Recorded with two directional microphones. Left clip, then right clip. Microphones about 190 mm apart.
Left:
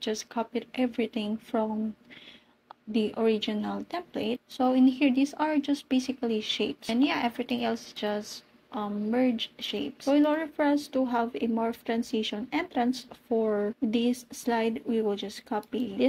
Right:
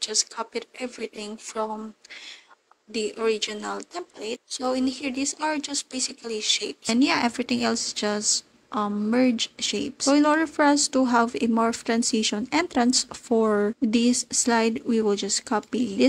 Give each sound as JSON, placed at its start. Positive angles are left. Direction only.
{"t": 0.0, "sound": "speech", "side_deg": -45}
{"t": 2.9, "sound": "speech", "side_deg": -50}